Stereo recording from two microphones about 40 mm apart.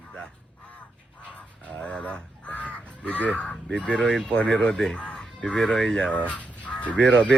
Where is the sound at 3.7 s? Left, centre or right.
Left.